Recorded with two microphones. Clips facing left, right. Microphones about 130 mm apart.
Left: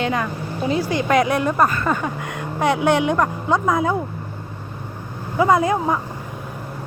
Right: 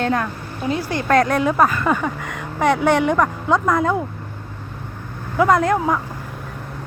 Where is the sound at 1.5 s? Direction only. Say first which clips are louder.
Right 2 dB; 5° right (ahead or behind).